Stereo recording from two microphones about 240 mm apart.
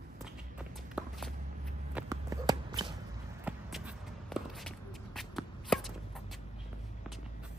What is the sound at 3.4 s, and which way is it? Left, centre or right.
Shuffle, centre.